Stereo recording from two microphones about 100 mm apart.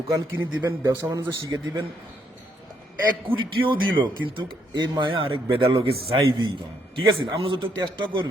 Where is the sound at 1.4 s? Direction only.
40° right (ahead or behind).